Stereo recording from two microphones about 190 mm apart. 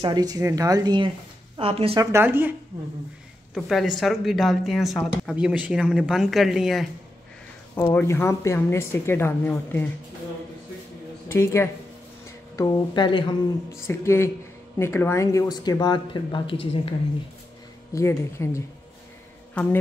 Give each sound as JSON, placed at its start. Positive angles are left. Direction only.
{"t": 0.0, "sound": "speech", "side_deg": -20}
{"t": 2.1, "sound": "speech", "side_deg": -10}
{"t": 3.5, "sound": "speech", "side_deg": 0}
{"t": 7.7, "sound": "speech", "side_deg": 10}
{"t": 11.2, "sound": "speech", "side_deg": 15}
{"t": 13.8, "sound": "speech", "side_deg": 15}
{"t": 17.9, "sound": "speech", "side_deg": 15}